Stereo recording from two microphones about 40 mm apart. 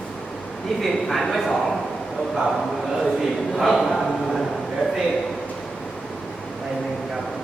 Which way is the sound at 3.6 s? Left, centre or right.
Centre.